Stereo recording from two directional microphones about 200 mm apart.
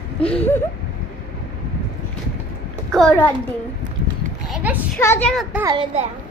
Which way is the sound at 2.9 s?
5° left (ahead or behind).